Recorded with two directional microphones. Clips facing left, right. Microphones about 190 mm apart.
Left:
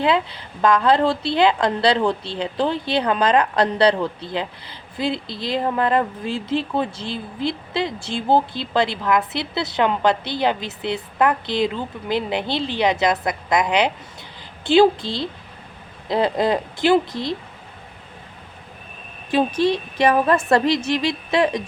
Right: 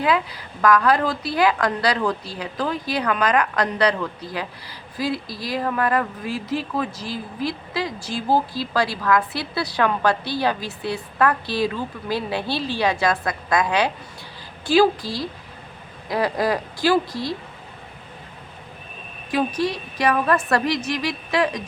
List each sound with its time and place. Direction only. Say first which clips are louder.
0.0 s a woman's voice: left 2 dB; 25° left (ahead or behind)
19.3 s a woman's voice: left 4 dB; 25° left (ahead or behind)